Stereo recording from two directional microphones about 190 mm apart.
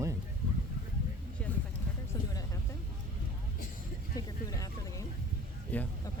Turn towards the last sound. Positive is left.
turn(degrees=10)  # may be behind; listen again after turning